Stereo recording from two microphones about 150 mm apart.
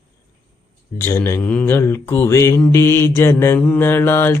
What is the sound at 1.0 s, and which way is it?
Mantra, 15° left (ahead or behind).